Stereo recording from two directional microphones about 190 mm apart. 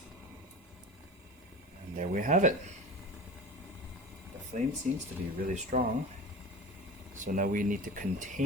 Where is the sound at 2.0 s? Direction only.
40° right (ahead or behind).